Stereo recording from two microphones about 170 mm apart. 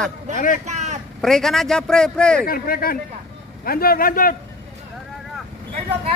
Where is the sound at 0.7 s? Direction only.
40° right (ahead or behind).